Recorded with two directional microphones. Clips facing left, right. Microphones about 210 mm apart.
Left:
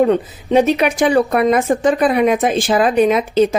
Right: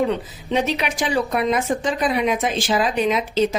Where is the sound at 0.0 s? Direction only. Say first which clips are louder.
Left 7 dB; 50° left (ahead or behind).